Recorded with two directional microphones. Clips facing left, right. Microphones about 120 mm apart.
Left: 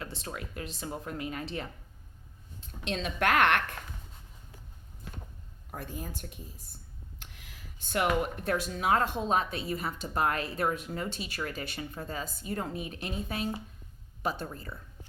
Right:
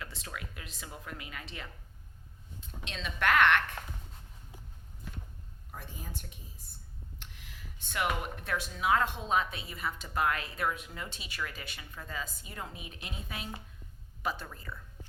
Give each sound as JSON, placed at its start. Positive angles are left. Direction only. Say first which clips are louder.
{"t": 0.0, "sound": "speech", "louder": "left 4 dB", "side_deg": 30}
{"t": 2.9, "sound": "speech", "louder": "left 2 dB", "side_deg": 45}
{"t": 5.7, "sound": "speech", "louder": "left 6 dB", "side_deg": 50}
{"t": 7.8, "sound": "speech", "louder": "left 5 dB", "side_deg": 40}